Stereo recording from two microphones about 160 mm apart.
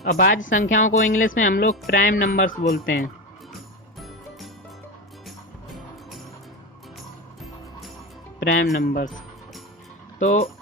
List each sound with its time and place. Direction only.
0.0 s speech: 70° left (ahead or behind)
5.7 s music: centre (ahead or behind)
8.4 s speech: 70° left (ahead or behind)